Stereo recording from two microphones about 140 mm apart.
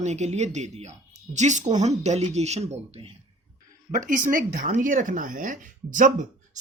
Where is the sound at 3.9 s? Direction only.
70° right (ahead or behind).